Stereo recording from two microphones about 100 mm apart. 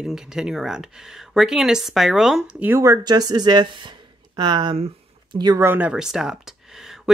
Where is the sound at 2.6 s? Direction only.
20° right (ahead or behind).